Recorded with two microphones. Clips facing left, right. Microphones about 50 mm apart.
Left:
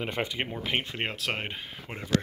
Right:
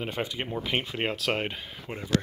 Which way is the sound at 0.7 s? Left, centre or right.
Centre.